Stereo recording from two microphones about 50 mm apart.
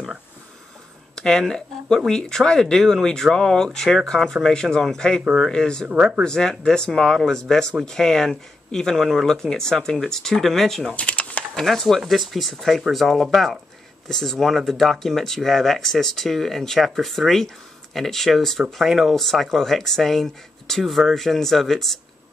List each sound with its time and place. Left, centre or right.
1.1 s a sound: centre
2.0 s speech: centre
5.9 s speech: centre
6.2 s speech: centre
10.9 s typing: left
11.5 s speech: centre
14.0 s speech: centre